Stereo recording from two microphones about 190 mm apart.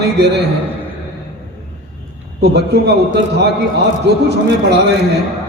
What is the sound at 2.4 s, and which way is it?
Speech, 60° right (ahead or behind).